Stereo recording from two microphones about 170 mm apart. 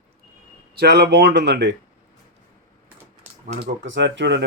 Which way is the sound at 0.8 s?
75° right (ahead or behind).